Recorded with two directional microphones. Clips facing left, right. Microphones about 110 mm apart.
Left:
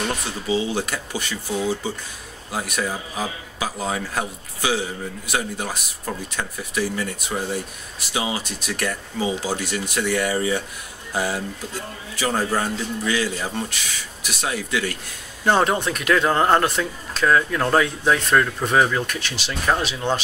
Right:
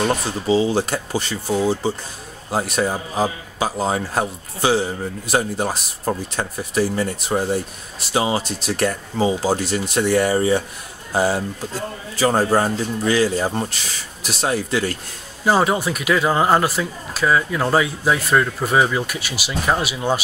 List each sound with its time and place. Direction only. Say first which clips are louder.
0.0 s speech: right 6 dB; 35° right (ahead or behind)
15.4 s speech: right 1 dB; 5° right (ahead or behind)